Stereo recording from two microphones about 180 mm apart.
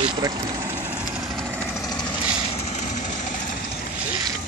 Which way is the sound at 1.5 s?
5° right (ahead or behind).